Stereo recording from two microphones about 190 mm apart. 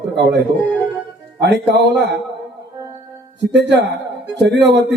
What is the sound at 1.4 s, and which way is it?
Speech, 60° right (ahead or behind).